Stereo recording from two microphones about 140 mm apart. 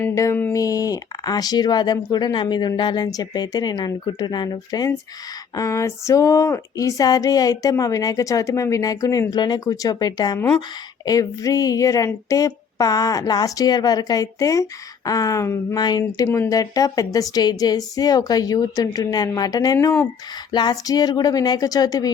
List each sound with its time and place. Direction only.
0.0 s speech: 20° left (ahead or behind)
10.3 s speech: 15° left (ahead or behind)
11.0 s speech: 25° left (ahead or behind)